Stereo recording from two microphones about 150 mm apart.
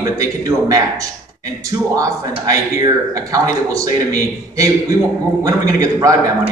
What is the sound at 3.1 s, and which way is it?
A man's voice, 25° right (ahead or behind).